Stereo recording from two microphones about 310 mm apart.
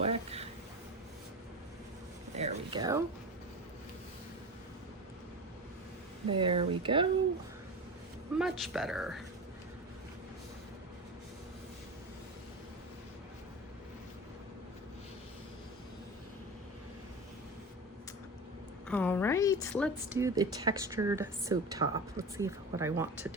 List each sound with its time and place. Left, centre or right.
0.0 s a sound: centre
2.3 s a sound: right
6.2 s a woman's voice: centre
8.4 s a woman's voice: centre
18.9 s a woman's voice: centre
20.1 s a woman's voice: centre